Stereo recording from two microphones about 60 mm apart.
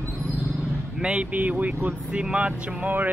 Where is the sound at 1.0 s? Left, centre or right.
Centre.